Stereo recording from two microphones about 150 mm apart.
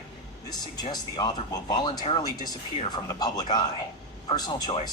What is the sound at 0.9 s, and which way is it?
Speech, 25° left (ahead or behind).